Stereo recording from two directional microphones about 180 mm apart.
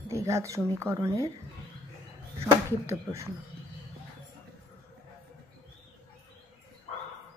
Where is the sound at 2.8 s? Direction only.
15° right (ahead or behind).